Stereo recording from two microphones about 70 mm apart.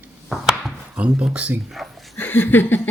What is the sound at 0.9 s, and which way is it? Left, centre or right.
Speech, centre.